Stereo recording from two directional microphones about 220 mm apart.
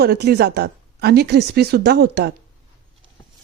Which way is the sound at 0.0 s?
45° right (ahead or behind).